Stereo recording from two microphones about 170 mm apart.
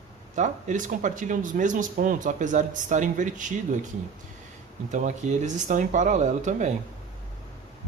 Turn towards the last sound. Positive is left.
turn(degrees=-45)  # may be behind; listen again after turning